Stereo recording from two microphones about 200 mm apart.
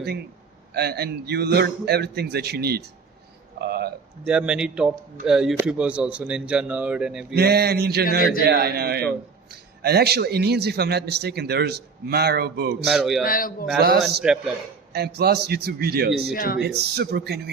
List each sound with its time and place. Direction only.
0.7 s a man's voice: 50° right (ahead or behind)
3.6 s a sound: 50° right (ahead or behind)
4.3 s speech: 5° right (ahead or behind)
7.3 s a man's voice: 55° right (ahead or behind)
12.8 s speech: centre (ahead or behind)
13.2 s a man's voice: 45° left (ahead or behind)
13.7 s a man's voice: 50° right (ahead or behind)
14.2 s speech: centre (ahead or behind)
14.9 s a man's voice: 55° right (ahead or behind)
16.3 s a man's voice: 45° left (ahead or behind)
16.6 s speech: 55° right (ahead or behind)